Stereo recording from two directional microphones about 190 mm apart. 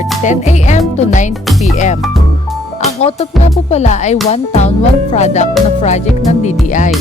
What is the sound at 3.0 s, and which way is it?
Music, 35° left (ahead or behind).